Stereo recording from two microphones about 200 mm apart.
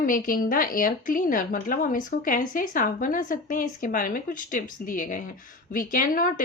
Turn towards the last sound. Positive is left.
turn(degrees=45)  # may be behind; listen again after turning